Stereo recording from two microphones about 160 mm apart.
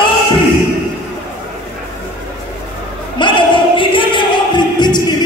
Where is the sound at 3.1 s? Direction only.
30° left (ahead or behind).